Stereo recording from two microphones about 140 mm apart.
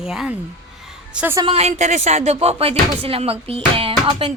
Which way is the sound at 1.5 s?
50° right (ahead or behind).